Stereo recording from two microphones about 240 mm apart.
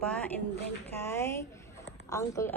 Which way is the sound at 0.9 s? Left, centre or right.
Centre.